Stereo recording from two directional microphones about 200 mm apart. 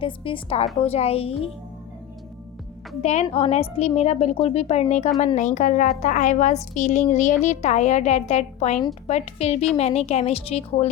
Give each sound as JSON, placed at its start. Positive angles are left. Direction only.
{"t": 0.0, "sound": "a woman's voice", "side_deg": 25}
{"t": 3.0, "sound": "a woman's voice", "side_deg": 35}